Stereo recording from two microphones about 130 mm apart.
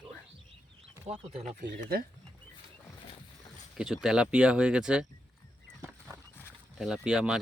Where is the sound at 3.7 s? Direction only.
5° right (ahead or behind).